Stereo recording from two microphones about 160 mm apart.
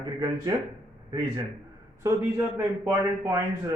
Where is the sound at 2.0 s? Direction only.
15° right (ahead or behind).